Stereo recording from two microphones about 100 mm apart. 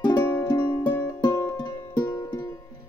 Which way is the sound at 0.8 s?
30° left (ahead or behind).